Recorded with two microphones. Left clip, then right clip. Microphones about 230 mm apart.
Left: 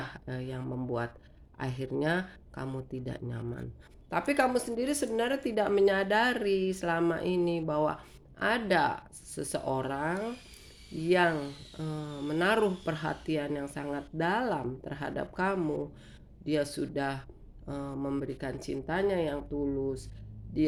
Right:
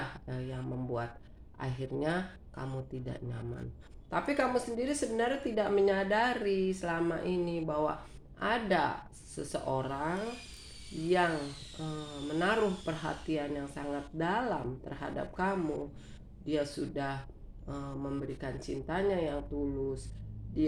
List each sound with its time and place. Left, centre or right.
0.3 s a woman's voice: left
11.8 s a woman's voice: left